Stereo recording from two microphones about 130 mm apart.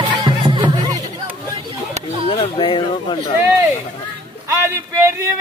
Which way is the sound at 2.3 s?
45° left (ahead or behind).